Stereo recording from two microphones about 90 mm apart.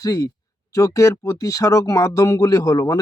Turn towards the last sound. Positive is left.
turn(degrees=40)  # may be behind; listen again after turning